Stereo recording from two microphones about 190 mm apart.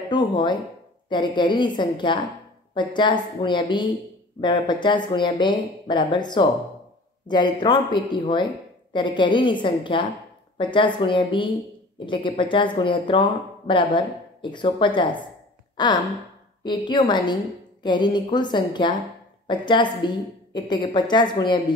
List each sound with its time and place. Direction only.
0.1 s speech: 25° left (ahead or behind)